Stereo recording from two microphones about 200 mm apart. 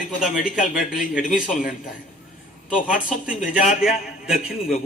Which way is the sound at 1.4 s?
40° left (ahead or behind).